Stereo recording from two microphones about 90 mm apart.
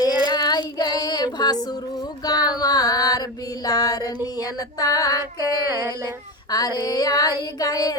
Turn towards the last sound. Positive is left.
turn(degrees=45)  # may be behind; listen again after turning